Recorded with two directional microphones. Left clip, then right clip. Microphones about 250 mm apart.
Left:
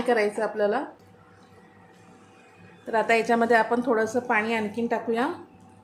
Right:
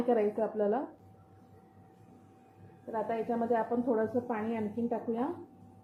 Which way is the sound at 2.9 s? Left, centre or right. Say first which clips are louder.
Left 12 dB; left.